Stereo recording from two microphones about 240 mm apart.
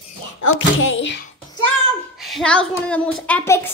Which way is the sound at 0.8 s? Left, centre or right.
Left.